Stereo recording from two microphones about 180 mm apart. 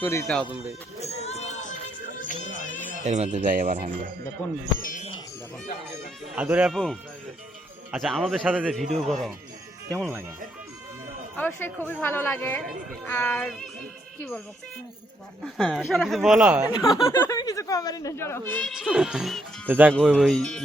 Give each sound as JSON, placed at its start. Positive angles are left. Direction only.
{"t": 0.0, "sound": "speech", "side_deg": 15}
{"t": 1.0, "sound": "a sound", "side_deg": 35}
{"t": 2.2, "sound": "music", "side_deg": 45}
{"t": 3.0, "sound": "speech", "side_deg": -40}
{"t": 4.8, "sound": "speech", "side_deg": 50}
{"t": 5.9, "sound": "speech", "side_deg": -10}
{"t": 11.3, "sound": "speech", "side_deg": 10}
{"t": 15.4, "sound": "speech", "side_deg": 5}
{"t": 16.8, "sound": "speech", "side_deg": 15}
{"t": 18.8, "sound": "speech", "side_deg": -5}
{"t": 19.9, "sound": "speech", "side_deg": 5}